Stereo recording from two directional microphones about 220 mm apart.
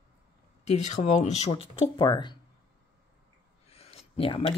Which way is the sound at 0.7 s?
30° left (ahead or behind).